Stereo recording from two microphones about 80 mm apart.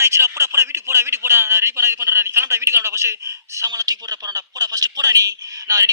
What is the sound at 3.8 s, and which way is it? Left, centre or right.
A man's voice, right.